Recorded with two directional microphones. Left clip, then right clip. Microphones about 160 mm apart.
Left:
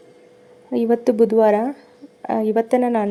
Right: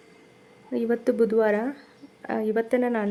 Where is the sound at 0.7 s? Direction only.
15° left (ahead or behind).